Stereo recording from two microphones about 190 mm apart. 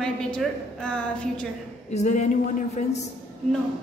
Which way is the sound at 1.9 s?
40° left (ahead or behind).